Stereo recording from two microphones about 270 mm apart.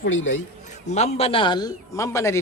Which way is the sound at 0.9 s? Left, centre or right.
Left.